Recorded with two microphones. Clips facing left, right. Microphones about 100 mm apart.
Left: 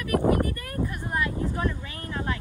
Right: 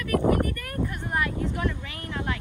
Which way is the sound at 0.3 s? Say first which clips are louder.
Even; 30° left (ahead or behind).